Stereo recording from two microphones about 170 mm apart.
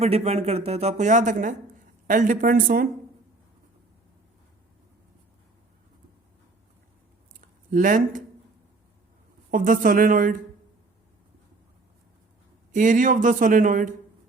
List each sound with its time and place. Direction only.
0.0 s speech: 40° right (ahead or behind); by 2.8 s 55° right (ahead or behind)
7.4 s speech: 50° right (ahead or behind)
9.5 s speech: 55° right (ahead or behind)
12.7 s speech: 50° right (ahead or behind)